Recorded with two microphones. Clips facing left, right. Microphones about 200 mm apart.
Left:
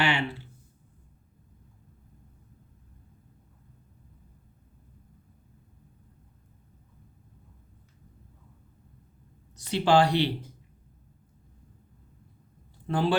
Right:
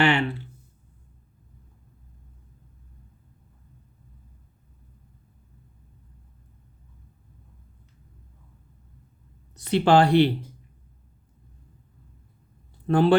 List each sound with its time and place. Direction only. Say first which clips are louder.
0.0 s speech: right 6 dB; 55° right (ahead or behind)
9.6 s speech: right 4 dB; 60° right (ahead or behind)
12.9 s speech: right 7 dB; 60° right (ahead or behind)